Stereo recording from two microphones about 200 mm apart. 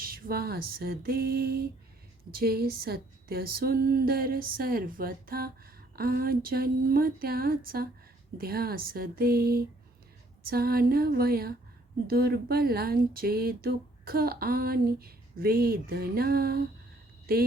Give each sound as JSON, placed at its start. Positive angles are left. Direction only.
{"t": 0.0, "sound": "speech", "side_deg": -50}